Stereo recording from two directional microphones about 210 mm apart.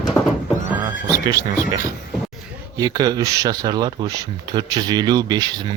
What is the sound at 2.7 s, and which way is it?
Speech, 20° right (ahead or behind).